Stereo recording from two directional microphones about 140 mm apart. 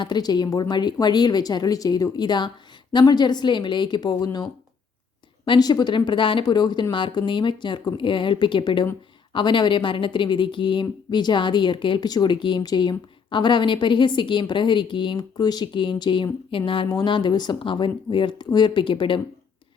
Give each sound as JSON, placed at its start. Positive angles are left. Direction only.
{"t": 0.0, "sound": "a woman's voice", "side_deg": 30}
{"t": 5.5, "sound": "a woman's voice", "side_deg": 30}